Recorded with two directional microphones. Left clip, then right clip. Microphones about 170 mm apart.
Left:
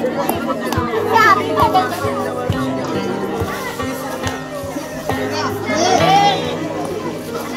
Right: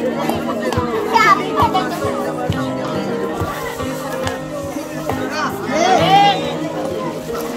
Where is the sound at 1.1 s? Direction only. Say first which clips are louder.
Left 1 dB; 15° left (ahead or behind).